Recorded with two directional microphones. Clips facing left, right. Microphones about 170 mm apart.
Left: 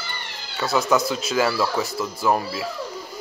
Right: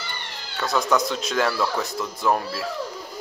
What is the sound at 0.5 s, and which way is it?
Cat, 5° left (ahead or behind).